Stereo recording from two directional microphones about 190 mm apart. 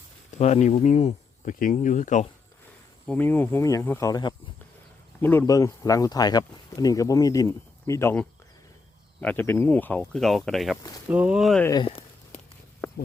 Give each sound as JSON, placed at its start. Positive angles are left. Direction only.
{"t": 0.3, "sound": "speech", "side_deg": 35}
{"t": 3.1, "sound": "speech", "side_deg": 10}
{"t": 11.6, "sound": "speech", "side_deg": 20}